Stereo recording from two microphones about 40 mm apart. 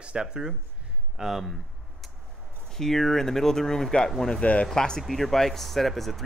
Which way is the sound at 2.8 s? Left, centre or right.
Centre.